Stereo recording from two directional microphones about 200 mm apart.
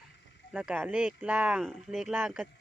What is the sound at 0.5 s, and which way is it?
Speech, 5° right (ahead or behind).